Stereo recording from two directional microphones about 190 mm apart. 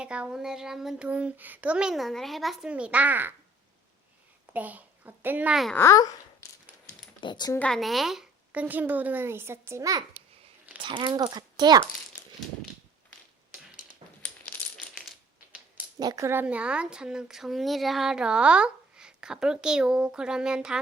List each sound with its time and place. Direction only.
0.0 s a woman's voice: 5° right (ahead or behind)
4.5 s a woman's voice: 10° right (ahead or behind)
5.7 s a child's voice: 15° left (ahead or behind)
7.2 s speech: 25° left (ahead or behind)
7.6 s a woman's voice: centre (ahead or behind); by 11.8 s 20° right (ahead or behind)
14.0 s a sound: 25° right (ahead or behind)
14.4 s coin: 10° left (ahead or behind)
16.0 s a woman's voice: 20° right (ahead or behind)